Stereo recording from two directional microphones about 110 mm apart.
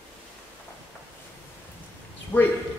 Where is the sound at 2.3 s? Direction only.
15° left (ahead or behind).